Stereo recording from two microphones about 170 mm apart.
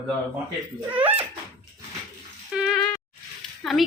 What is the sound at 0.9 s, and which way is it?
Speech, 10° right (ahead or behind).